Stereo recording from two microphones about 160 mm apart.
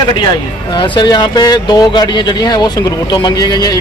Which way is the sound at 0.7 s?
30° left (ahead or behind).